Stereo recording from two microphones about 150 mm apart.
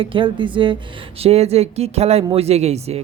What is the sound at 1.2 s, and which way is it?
Speech, 45° right (ahead or behind).